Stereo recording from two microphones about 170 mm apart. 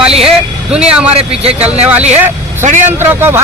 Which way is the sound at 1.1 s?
35° right (ahead or behind).